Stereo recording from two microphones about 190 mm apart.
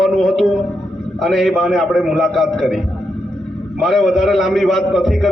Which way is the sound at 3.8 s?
Centre (ahead or behind).